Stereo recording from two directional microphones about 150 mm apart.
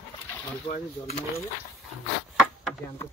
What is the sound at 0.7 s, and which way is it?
Speech, 50° left (ahead or behind).